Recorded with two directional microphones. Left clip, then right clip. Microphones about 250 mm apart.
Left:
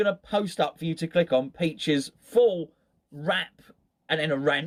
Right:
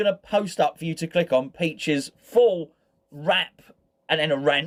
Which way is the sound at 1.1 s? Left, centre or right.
Centre.